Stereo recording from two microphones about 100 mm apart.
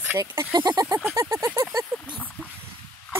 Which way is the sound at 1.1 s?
30° right (ahead or behind).